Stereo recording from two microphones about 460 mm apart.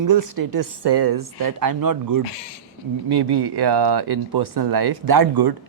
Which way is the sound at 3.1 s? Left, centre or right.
Right.